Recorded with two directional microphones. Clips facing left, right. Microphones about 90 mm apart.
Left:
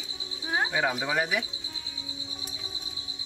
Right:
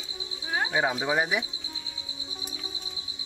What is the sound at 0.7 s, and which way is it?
Speech, 20° right (ahead or behind).